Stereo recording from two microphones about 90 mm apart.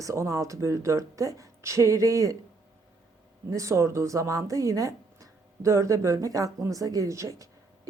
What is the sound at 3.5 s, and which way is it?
Speech, 35° right (ahead or behind).